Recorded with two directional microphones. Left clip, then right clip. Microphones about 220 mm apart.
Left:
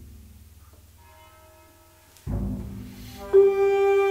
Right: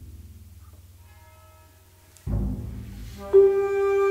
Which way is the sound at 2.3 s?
5° right (ahead or behind).